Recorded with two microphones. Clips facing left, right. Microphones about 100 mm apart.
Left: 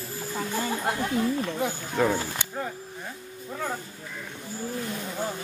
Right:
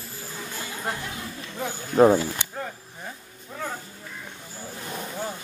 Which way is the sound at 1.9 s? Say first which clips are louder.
Right 9 dB; 35° right (ahead or behind).